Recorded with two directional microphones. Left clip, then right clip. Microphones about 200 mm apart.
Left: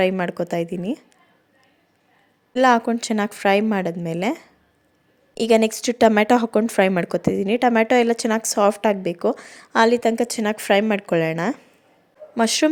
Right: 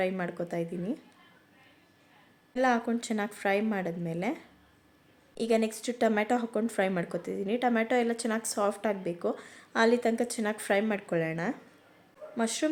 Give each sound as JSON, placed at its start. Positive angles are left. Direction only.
{"t": 0.0, "sound": "a woman's voice", "side_deg": 40}
{"t": 2.5, "sound": "a woman's voice", "side_deg": 45}